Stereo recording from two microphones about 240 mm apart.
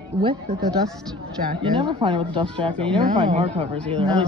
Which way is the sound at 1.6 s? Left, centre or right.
Right.